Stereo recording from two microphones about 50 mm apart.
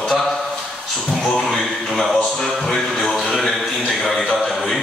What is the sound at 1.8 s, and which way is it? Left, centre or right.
Speech, centre.